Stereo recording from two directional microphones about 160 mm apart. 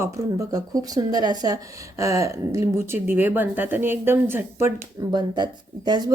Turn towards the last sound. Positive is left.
turn(degrees=-25)  # may be behind; listen again after turning